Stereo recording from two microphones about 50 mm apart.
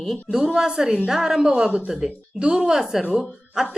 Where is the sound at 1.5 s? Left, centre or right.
Right.